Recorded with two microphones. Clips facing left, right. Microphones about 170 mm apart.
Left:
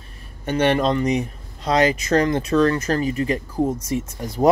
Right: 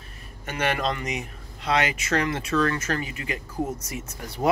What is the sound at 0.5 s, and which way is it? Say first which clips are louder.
Speech: left 8 dB; 30° left (ahead or behind).